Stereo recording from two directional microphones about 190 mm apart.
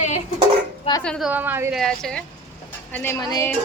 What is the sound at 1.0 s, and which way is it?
Speech, 5° left (ahead or behind).